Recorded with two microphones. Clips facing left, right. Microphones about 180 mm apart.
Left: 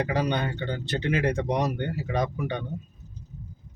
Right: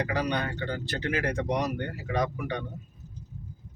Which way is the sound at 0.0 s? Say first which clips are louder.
Left 3 dB; 25° left (ahead or behind).